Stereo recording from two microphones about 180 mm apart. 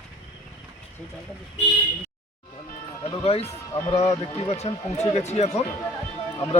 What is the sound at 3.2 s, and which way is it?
Speech, 35° left (ahead or behind).